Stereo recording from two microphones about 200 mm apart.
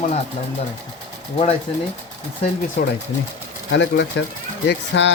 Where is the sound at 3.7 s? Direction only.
65° left (ahead or behind).